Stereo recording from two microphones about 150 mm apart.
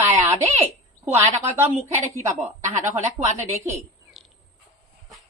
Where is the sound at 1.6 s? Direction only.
45° right (ahead or behind).